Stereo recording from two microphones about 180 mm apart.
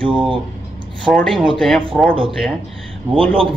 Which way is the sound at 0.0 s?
30° right (ahead or behind).